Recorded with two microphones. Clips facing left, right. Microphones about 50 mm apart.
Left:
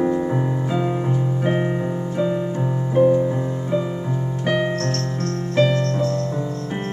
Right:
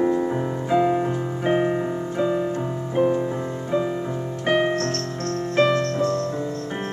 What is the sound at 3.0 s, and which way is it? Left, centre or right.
Music, centre.